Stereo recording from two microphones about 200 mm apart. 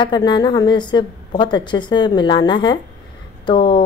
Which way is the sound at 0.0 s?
20° left (ahead or behind).